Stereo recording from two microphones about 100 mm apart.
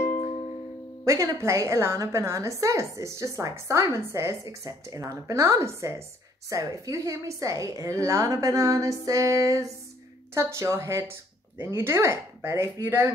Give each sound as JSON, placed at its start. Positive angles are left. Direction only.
{"t": 1.0, "sound": "a woman's voice", "side_deg": -30}